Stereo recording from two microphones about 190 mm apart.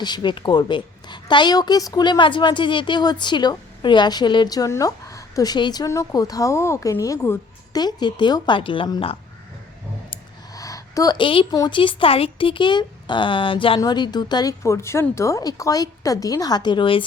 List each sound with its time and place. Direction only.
0.0 s a woman's voice: 25° left (ahead or behind)